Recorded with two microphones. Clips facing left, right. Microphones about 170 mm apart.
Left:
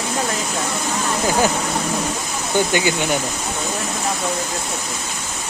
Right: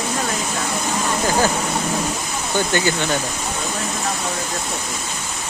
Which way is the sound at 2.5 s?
15° left (ahead or behind).